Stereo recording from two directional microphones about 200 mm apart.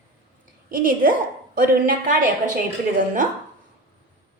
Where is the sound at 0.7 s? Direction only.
45° right (ahead or behind).